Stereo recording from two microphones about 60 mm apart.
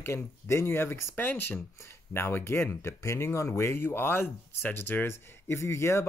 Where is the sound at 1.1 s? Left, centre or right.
Left.